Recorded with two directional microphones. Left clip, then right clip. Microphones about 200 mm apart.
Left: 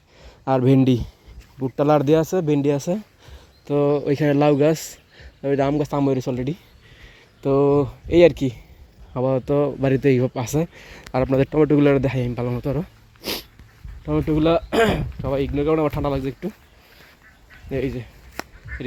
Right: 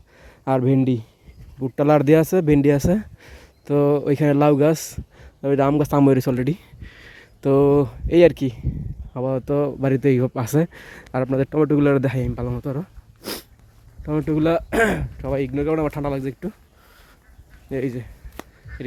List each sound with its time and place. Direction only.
0.2 s a sound: 15° right (ahead or behind)
0.6 s speech: 5° right (ahead or behind)
1.7 s speech: 20° right (ahead or behind)
11.1 s speech: 5° right (ahead or behind)
12.3 s speech: centre (ahead or behind)
13.2 s dog: 10° right (ahead or behind)
14.0 s speech: 10° right (ahead or behind)
17.7 s speech: 15° right (ahead or behind)
18.7 s honk: 55° right (ahead or behind)